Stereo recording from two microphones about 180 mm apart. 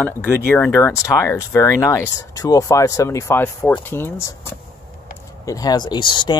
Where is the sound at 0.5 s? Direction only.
15° left (ahead or behind).